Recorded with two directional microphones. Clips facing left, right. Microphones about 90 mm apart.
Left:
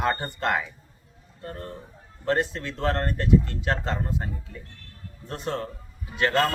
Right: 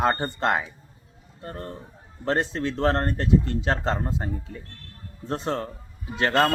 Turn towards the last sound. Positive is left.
turn(degrees=-30)  # may be behind; listen again after turning